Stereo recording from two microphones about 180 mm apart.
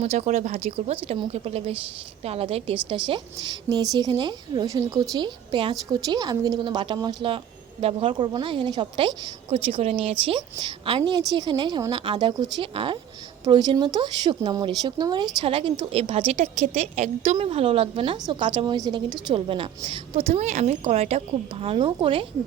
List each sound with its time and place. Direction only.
0.0 s a woman's voice: 40° right (ahead or behind)